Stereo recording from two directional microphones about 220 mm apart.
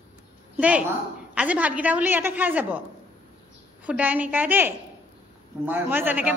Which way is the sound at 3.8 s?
5° right (ahead or behind).